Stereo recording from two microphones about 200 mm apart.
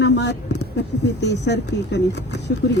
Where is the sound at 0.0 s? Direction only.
60° left (ahead or behind).